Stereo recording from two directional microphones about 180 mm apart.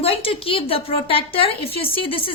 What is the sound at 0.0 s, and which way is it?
A woman's voice, 30° left (ahead or behind).